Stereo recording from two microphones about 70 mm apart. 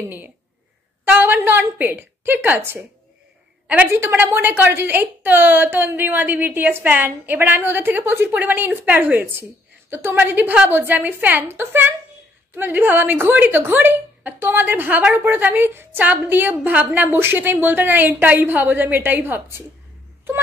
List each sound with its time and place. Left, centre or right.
1.0 s a woman's voice: right
3.9 s a woman's voice: right